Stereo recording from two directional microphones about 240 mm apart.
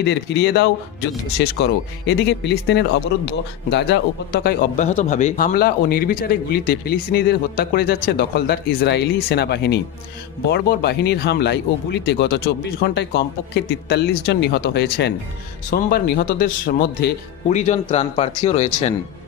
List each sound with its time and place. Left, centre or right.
0.0 s speech: left
4.9 s a man's voice: left
17.5 s speech: left